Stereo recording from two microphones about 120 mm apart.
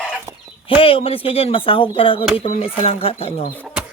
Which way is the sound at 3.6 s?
10° right (ahead or behind).